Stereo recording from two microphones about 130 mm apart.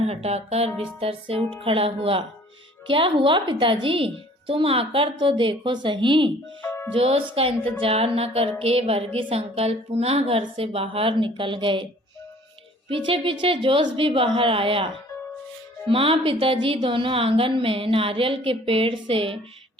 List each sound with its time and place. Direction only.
0.0 s a woman's voice: 55° right (ahead or behind)
6.7 s music: 20° left (ahead or behind)
6.9 s a woman's voice: 45° right (ahead or behind)
12.9 s a woman's voice: 40° right (ahead or behind)
15.9 s a woman's voice: 45° right (ahead or behind)